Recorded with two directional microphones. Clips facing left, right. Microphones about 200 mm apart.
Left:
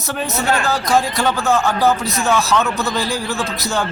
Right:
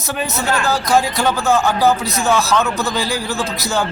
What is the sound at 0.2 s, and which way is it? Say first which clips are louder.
Speech: left 1 dB; centre (ahead or behind).